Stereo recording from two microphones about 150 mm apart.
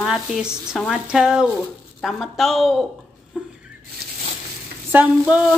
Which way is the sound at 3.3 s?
5° right (ahead or behind).